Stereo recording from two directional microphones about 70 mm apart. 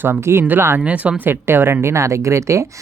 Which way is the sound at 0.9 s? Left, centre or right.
Centre.